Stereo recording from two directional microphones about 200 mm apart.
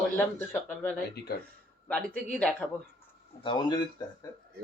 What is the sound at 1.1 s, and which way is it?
Speech, 55° left (ahead or behind).